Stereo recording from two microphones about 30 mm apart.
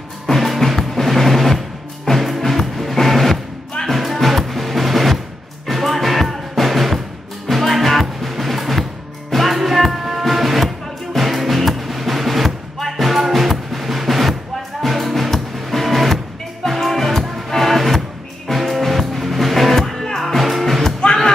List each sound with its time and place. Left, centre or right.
0.3 s music: centre
21.0 s music: left